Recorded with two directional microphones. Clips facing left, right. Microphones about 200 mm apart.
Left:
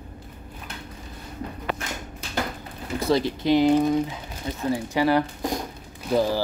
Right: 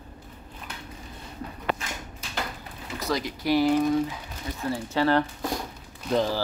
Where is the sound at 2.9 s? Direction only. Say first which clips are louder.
Left 7 dB; 30° left (ahead or behind).